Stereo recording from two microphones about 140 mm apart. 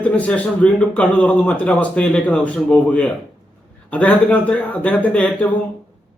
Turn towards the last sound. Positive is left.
turn(degrees=10)  # may be behind; listen again after turning